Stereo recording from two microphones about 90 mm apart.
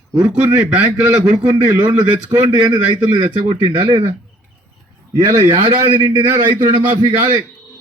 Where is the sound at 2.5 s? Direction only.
60° right (ahead or behind).